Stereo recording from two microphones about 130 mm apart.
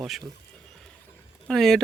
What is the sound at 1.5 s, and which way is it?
Speech, centre (ahead or behind).